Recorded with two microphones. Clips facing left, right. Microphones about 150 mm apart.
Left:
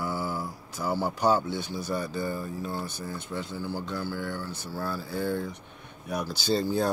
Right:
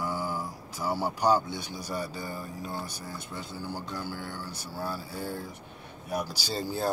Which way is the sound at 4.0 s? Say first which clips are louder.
Left 4 dB; 50° left (ahead or behind).